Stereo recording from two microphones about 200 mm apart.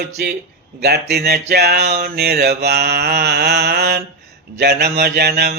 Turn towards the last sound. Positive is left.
turn(degrees=-50)  # may be behind; listen again after turning